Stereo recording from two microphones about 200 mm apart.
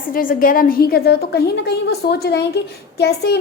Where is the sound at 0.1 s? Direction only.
45° left (ahead or behind).